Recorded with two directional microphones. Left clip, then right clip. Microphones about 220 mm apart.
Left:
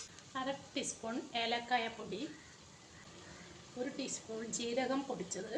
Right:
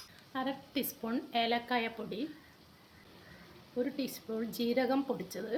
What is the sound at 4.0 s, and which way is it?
A woman's voice, 55° right (ahead or behind).